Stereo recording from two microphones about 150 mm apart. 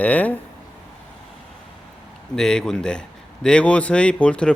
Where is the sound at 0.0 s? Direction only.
10° left (ahead or behind).